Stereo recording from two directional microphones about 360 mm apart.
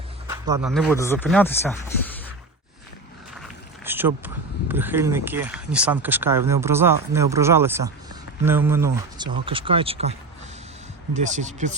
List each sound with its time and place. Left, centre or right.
0.3 s speech: centre
3.8 s a sound: centre
4.7 s speech: centre